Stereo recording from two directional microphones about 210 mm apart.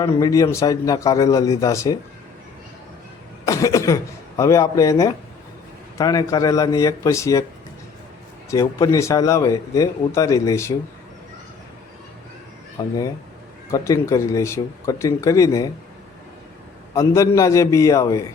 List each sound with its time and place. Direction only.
0.0 s speech: 15° left (ahead or behind)
3.4 s speech: 15° left (ahead or behind)
8.4 s speech: 15° left (ahead or behind)
12.8 s speech: 15° left (ahead or behind)
16.9 s speech: 15° left (ahead or behind)